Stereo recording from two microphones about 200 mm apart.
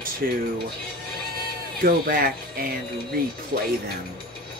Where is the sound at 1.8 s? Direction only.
50° right (ahead or behind).